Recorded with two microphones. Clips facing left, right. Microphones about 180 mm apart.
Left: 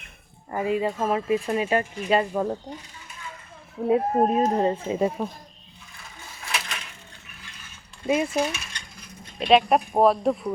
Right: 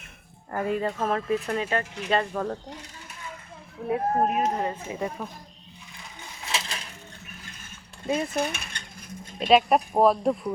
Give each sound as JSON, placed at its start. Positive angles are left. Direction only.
{"t": 0.5, "sound": "speech", "side_deg": 5}
{"t": 3.8, "sound": "speech", "side_deg": 25}
{"t": 6.4, "sound": "a sound", "side_deg": -30}
{"t": 8.0, "sound": "speech", "side_deg": 10}
{"t": 8.4, "sound": "mechanisms", "side_deg": -55}
{"t": 9.5, "sound": "speech", "side_deg": 0}